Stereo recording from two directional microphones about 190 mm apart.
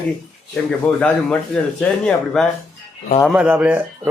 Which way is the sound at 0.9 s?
5° left (ahead or behind).